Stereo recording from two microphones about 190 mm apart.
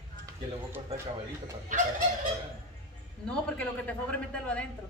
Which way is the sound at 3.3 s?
5° left (ahead or behind).